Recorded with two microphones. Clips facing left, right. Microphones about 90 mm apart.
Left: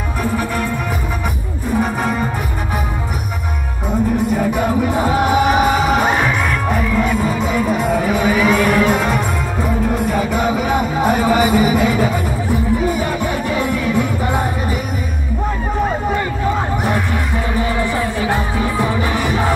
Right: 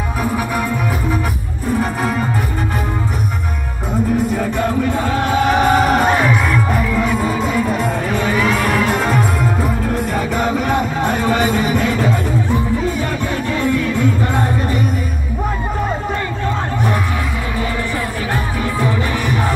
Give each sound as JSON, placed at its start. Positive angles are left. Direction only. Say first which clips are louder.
{"t": 1.8, "sound": "music", "louder": "left 2 dB", "side_deg": 0}
{"t": 4.3, "sound": "music", "louder": "left 2 dB", "side_deg": 5}
{"t": 13.5, "sound": "music", "louder": "right 3 dB", "side_deg": 15}
{"t": 17.7, "sound": "music", "louder": "left 3 dB", "side_deg": 20}